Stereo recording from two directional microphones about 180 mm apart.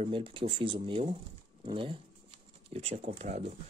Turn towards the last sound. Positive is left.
turn(degrees=-35)  # may be behind; listen again after turning